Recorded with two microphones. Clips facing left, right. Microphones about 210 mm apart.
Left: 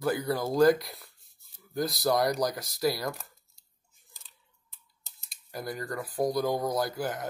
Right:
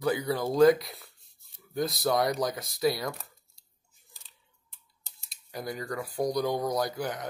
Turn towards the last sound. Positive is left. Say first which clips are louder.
# even
turn(degrees=5)  # may be behind; listen again after turning